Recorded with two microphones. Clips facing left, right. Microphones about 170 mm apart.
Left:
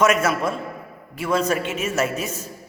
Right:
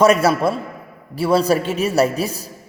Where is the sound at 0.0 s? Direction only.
35° right (ahead or behind).